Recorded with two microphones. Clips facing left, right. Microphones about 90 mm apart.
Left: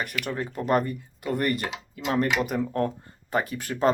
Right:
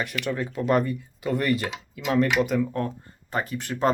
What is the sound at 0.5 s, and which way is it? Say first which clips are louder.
Speech: right 1 dB; 45° left (ahead or behind).